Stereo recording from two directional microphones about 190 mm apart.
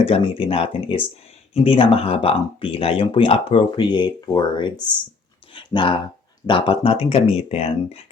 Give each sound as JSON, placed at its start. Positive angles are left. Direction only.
{"t": 0.0, "sound": "speech", "side_deg": 30}